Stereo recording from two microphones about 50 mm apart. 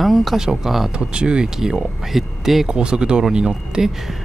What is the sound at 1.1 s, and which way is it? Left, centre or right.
Speech, centre.